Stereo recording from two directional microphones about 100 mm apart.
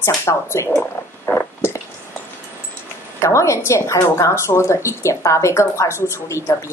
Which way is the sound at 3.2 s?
30° left (ahead or behind).